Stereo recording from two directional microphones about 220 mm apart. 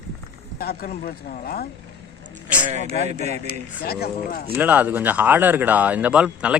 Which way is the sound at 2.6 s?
30° right (ahead or behind).